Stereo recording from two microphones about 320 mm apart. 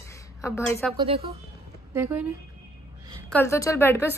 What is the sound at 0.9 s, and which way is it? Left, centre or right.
Speech, centre.